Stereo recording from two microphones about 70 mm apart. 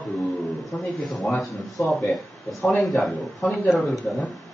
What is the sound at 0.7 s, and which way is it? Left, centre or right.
Speech, centre.